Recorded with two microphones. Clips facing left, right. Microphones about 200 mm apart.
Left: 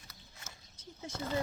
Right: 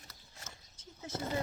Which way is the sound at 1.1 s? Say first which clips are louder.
Even; 20° right (ahead or behind).